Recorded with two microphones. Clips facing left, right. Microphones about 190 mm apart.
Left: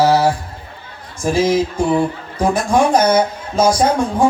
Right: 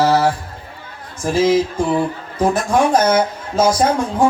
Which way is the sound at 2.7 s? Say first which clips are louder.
Left 2 dB; 15° left (ahead or behind).